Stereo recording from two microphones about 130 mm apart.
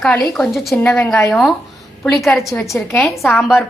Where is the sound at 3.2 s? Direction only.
5° right (ahead or behind).